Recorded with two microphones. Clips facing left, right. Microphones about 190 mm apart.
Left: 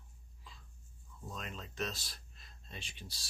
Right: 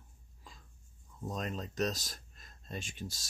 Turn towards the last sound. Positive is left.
turn(degrees=-45)  # may be behind; listen again after turning